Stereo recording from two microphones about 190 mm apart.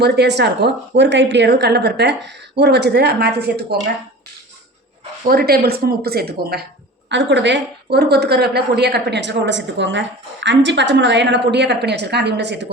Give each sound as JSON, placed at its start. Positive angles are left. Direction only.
{"t": 0.0, "sound": "a woman's voice", "side_deg": -60}
{"t": 5.3, "sound": "a woman's voice", "side_deg": -55}
{"t": 7.1, "sound": "a woman's voice", "side_deg": -70}